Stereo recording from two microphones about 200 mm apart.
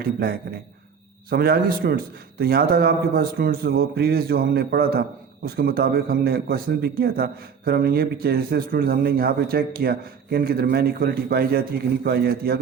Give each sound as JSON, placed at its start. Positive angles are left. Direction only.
{"t": 0.0, "sound": "a man's voice", "side_deg": -50}